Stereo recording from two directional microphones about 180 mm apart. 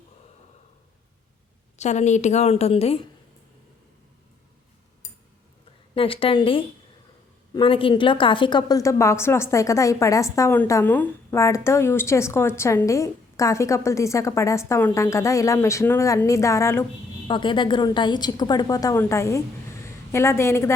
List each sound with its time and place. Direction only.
1.8 s a woman's voice: 40° left (ahead or behind)
5.9 s a woman's voice: 30° left (ahead or behind)
17.2 s a woman's voice: 25° left (ahead or behind)